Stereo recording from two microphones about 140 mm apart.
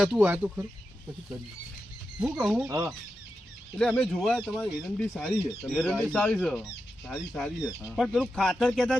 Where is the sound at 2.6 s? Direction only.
20° right (ahead or behind).